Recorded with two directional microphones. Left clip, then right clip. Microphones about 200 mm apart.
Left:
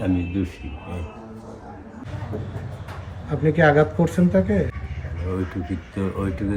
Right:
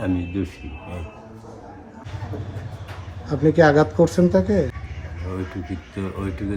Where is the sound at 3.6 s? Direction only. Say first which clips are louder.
Right 2 dB; 20° right (ahead or behind).